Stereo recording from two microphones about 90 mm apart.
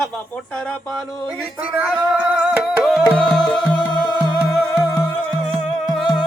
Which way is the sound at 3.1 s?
10° left (ahead or behind).